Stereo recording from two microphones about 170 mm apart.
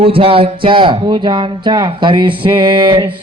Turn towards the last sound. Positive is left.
turn(degrees=-25)  # may be behind; listen again after turning